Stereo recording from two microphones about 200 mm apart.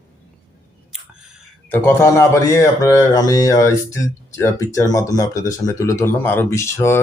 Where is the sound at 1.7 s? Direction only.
15° left (ahead or behind).